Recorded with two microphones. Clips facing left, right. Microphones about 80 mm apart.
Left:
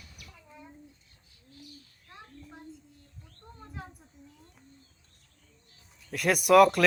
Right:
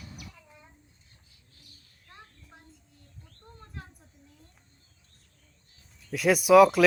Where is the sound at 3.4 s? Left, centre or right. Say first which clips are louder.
Left 3 dB; centre.